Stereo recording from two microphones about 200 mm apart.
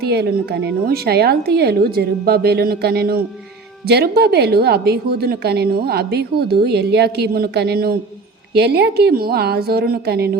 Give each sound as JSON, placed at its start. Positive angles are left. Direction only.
{"t": 0.0, "sound": "a woman's voice", "side_deg": -55}